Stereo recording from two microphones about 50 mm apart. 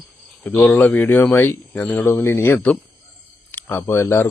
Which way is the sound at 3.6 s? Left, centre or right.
Left.